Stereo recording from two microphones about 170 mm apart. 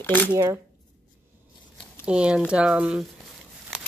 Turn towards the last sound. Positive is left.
turn(degrees=-5)  # may be behind; listen again after turning